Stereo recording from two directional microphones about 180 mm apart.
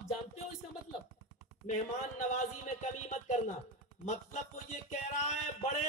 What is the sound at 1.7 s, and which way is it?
Music, 40° left (ahead or behind).